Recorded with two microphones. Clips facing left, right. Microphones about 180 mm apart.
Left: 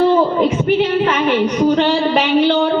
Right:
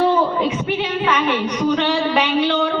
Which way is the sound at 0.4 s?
45° left (ahead or behind).